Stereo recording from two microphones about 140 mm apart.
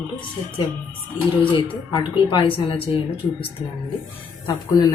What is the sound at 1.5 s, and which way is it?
Speech, 35° left (ahead or behind).